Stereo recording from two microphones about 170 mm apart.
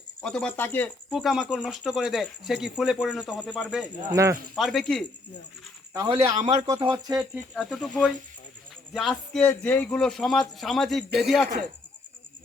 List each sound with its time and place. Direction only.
0.2 s speech: 5° left (ahead or behind)
1.1 s a man's voice: centre (ahead or behind)
4.1 s speech: 20° right (ahead or behind)
4.5 s a man's voice: centre (ahead or behind)
5.9 s speech: 20° right (ahead or behind)
6.3 s speech: 40° right (ahead or behind)
6.7 s speech: 25° right (ahead or behind)
7.1 s a man's voice: centre (ahead or behind)